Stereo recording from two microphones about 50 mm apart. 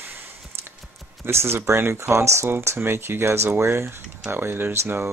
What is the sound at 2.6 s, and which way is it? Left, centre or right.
Speech, right.